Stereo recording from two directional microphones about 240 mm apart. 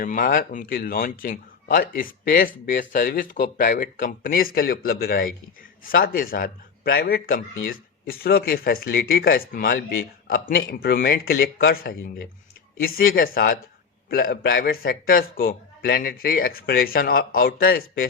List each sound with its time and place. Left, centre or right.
0.0 s speech: left